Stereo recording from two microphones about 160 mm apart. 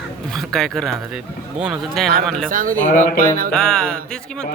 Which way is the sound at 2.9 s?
50° left (ahead or behind).